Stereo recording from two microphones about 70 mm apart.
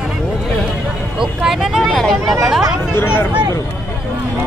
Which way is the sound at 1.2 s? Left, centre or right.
Centre.